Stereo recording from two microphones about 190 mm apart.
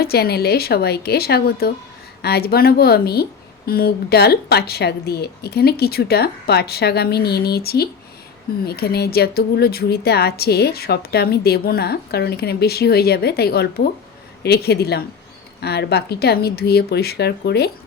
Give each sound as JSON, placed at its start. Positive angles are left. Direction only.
{"t": 0.0, "sound": "speech", "side_deg": 55}